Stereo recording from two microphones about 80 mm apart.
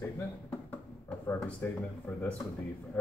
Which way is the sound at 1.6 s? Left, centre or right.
Left.